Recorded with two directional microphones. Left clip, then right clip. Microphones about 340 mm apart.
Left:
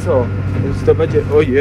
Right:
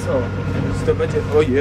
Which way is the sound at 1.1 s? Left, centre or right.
Centre.